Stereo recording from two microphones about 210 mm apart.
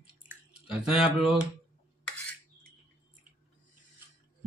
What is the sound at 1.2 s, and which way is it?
Speech, 5° right (ahead or behind).